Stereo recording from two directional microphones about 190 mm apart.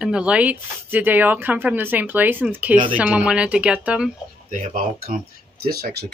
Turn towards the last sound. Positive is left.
turn(degrees=-55)  # may be behind; listen again after turning